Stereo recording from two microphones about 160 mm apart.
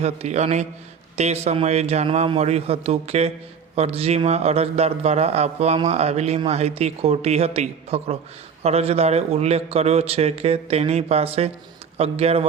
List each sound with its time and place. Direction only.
0.0 s a man's voice: 45° right (ahead or behind)